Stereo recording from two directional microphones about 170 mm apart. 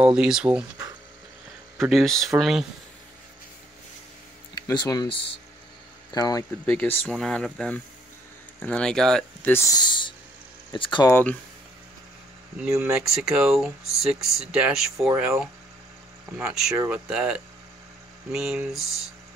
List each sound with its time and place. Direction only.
0.0 s speech: 5° right (ahead or behind)
1.8 s speech: centre (ahead or behind)
4.6 s speech: 25° left (ahead or behind)
6.6 s speech: 10° left (ahead or behind); by 11.1 s 25° left (ahead or behind)
11.1 s speech: 10° left (ahead or behind)
12.6 s speech: 10° right (ahead or behind)